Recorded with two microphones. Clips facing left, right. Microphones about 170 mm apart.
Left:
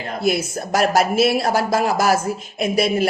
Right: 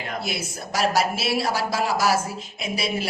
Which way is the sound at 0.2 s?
50° left (ahead or behind).